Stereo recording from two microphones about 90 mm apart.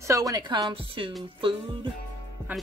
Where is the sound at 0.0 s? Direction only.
40° right (ahead or behind).